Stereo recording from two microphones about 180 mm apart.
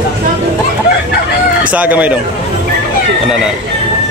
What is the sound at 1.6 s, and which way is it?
Speech, 10° right (ahead or behind).